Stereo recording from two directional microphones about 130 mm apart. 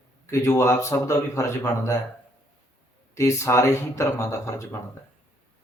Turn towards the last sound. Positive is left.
turn(degrees=20)  # may be behind; listen again after turning